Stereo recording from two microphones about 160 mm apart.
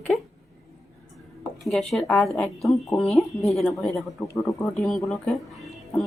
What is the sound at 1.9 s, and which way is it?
Speech, centre (ahead or behind).